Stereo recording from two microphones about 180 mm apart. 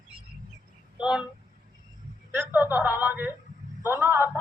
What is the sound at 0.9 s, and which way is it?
Speech, 5° right (ahead or behind).